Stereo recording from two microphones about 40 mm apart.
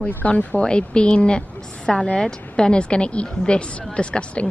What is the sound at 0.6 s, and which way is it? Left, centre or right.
A woman's voice, left.